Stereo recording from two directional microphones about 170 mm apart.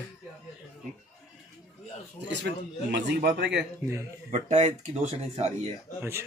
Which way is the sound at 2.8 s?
80° right.